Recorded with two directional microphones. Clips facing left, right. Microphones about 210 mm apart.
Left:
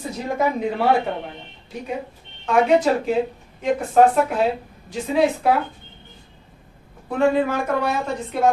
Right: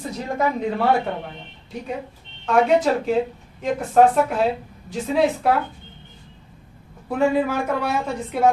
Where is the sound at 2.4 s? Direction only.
Centre (ahead or behind).